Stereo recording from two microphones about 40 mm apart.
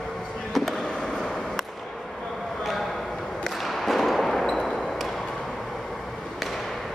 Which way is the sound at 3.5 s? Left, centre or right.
Centre.